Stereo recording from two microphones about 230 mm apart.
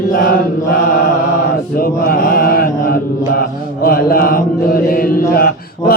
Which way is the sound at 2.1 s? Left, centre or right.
Left.